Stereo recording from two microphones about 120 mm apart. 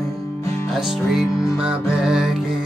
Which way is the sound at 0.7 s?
Centre (ahead or behind).